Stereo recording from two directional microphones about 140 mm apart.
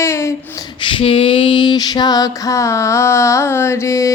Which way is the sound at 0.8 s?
35° left (ahead or behind).